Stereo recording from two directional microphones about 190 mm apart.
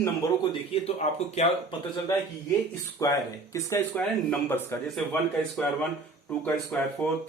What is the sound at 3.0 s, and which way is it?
Speech, 20° left (ahead or behind).